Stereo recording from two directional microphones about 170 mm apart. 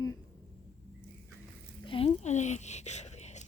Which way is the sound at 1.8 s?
35° left (ahead or behind).